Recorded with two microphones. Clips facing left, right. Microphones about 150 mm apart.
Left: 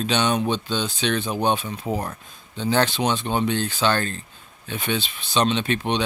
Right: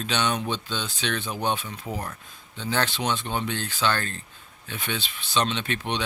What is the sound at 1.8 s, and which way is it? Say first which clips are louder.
Speech: left 6 dB; 35° left (ahead or behind).